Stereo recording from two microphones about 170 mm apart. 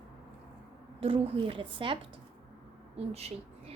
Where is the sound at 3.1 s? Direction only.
35° right (ahead or behind).